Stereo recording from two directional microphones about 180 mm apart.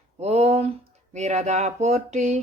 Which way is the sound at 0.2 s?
35° right (ahead or behind).